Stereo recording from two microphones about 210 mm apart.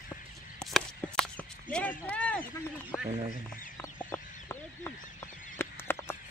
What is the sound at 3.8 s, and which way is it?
Chicken, 10° left (ahead or behind).